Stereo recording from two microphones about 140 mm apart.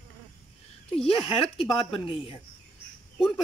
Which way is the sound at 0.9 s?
40° left (ahead or behind).